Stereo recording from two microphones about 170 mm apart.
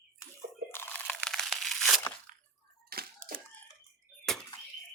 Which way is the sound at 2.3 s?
50° right (ahead or behind).